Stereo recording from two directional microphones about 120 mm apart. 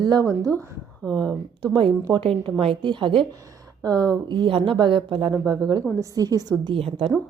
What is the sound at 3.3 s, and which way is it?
Speech, 30° right (ahead or behind).